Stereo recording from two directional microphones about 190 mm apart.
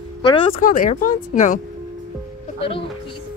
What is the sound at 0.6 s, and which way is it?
Speech, 45° left (ahead or behind).